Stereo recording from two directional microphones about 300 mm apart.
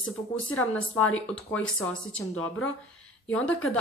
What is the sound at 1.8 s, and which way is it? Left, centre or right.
Speech, centre.